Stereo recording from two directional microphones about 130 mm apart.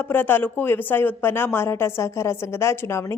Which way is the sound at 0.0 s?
15° left (ahead or behind).